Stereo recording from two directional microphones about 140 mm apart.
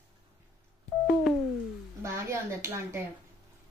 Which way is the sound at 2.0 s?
20° right (ahead or behind).